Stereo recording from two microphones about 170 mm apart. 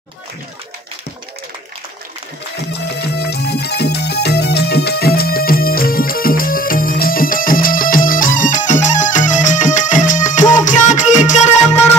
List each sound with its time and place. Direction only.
2.7 s music: 75° left (ahead or behind); by 11.8 s 45° left (ahead or behind)